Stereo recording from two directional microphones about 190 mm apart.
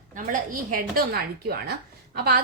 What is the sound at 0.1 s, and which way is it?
A woman's voice, 45° right (ahead or behind).